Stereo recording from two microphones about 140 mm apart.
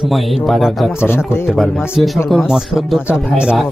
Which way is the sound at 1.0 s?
15° left (ahead or behind).